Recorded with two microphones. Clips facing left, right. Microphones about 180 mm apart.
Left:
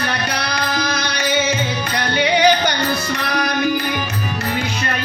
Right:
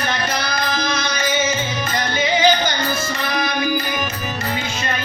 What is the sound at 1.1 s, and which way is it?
Music, 65° left (ahead or behind).